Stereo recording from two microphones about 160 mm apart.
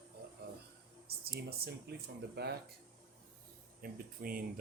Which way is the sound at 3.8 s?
65° right (ahead or behind).